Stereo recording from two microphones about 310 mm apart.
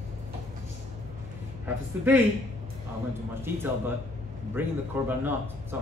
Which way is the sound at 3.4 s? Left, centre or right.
Centre.